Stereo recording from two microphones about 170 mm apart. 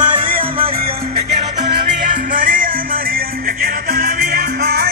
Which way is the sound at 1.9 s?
50° right (ahead or behind).